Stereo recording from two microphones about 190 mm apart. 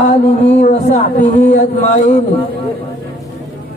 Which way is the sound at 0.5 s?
35° left (ahead or behind).